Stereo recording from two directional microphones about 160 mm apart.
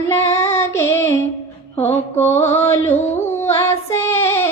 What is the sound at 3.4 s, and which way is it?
Child singing, 15° left (ahead or behind).